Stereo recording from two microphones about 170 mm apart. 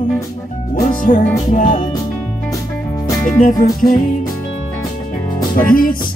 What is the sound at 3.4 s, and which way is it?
Music, 50° left (ahead or behind).